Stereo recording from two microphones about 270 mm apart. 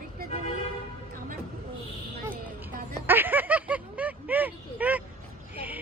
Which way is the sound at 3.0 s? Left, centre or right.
Centre.